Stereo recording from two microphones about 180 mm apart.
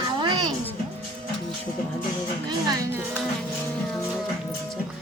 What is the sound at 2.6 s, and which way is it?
Speech, 10° right (ahead or behind).